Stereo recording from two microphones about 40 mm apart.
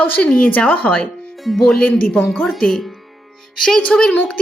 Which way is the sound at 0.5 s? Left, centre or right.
Left.